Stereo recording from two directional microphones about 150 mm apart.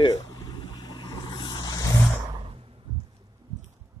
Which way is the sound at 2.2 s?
30° right (ahead or behind).